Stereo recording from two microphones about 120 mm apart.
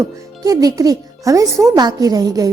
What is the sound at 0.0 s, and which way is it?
A woman's voice, 30° right (ahead or behind).